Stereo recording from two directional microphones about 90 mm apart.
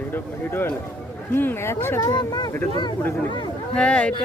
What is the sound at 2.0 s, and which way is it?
Speech, 50° left (ahead or behind).